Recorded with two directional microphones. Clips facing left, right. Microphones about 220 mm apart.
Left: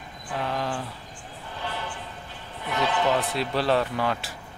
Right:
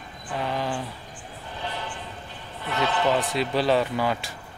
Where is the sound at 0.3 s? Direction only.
Centre (ahead or behind).